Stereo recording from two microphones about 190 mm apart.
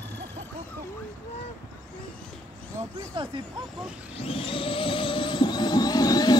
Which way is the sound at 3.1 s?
25° right (ahead or behind).